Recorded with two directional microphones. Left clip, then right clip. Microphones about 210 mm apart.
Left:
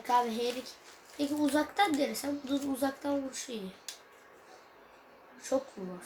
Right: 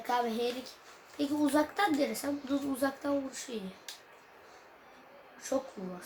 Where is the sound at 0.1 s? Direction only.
Centre (ahead or behind).